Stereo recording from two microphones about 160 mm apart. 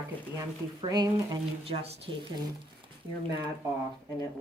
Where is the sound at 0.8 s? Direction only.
25° right (ahead or behind).